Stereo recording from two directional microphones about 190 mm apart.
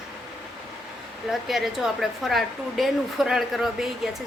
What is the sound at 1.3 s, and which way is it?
A woman's voice, centre (ahead or behind).